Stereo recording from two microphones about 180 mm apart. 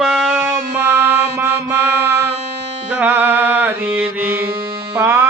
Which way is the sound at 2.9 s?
10° right (ahead or behind).